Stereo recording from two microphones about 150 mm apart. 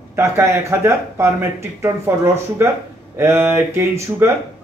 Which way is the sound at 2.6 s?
15° right (ahead or behind).